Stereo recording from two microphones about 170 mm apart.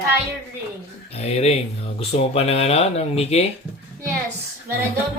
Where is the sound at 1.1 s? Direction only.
40° left (ahead or behind).